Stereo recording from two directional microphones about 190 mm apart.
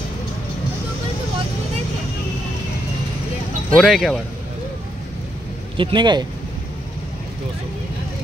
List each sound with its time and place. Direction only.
3.7 s speech: centre (ahead or behind)
5.8 s speech: 25° right (ahead or behind)